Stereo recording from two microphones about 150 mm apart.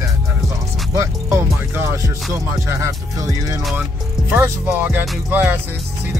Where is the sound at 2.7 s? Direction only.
20° right (ahead or behind).